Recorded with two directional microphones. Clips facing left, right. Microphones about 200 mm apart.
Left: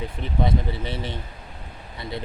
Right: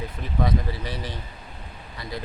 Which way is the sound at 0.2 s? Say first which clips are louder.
Left 1 dB; 25° left (ahead or behind).